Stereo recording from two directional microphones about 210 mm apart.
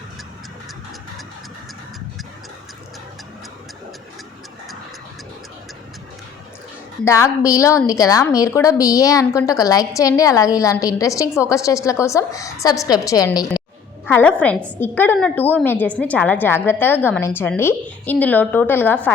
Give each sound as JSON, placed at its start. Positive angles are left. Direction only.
{"t": 7.0, "sound": "a woman's voice", "side_deg": 15}